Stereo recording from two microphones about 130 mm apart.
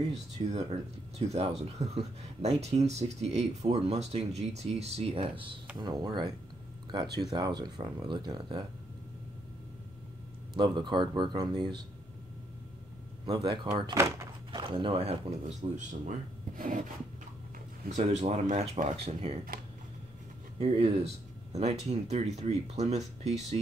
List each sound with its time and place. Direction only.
0.1 s speech: 60° right (ahead or behind)
5.8 s speech: 35° right (ahead or behind)
10.5 s speech: 35° right (ahead or behind)
13.2 s speech: 35° right (ahead or behind)
13.9 s speech: 20° right (ahead or behind)
14.5 s speech: 40° right (ahead or behind); by 15.8 s 60° right (ahead or behind)
16.5 s rub: 90° right
17.8 s speech: 60° right (ahead or behind)
20.5 s speech: 50° right (ahead or behind)